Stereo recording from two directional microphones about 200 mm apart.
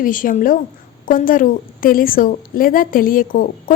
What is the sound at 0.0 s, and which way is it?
A woman's voice, 45° left (ahead or behind).